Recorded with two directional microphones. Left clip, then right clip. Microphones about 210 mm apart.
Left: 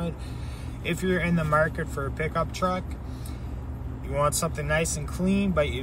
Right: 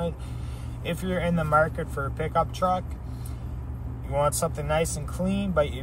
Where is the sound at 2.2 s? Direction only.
15° right (ahead or behind).